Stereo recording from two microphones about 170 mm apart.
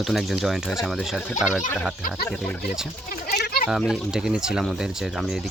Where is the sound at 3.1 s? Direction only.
65° left (ahead or behind).